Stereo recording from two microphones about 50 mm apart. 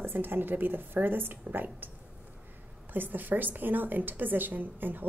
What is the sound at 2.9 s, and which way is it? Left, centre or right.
A woman's voice, right.